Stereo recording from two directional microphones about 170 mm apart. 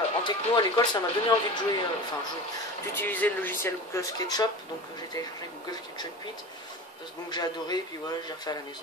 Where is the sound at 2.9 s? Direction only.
10° left (ahead or behind).